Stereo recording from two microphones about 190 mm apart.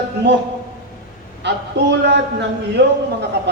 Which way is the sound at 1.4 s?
65° right (ahead or behind).